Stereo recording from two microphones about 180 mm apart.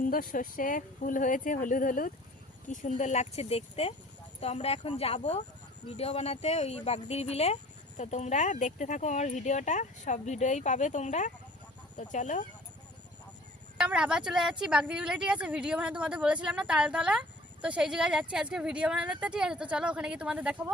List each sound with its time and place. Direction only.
0.0 s speech: 50° left (ahead or behind)
13.7 s a woman's voice: 5° right (ahead or behind)